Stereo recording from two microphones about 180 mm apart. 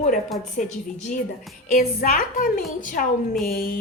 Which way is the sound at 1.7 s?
50° left (ahead or behind).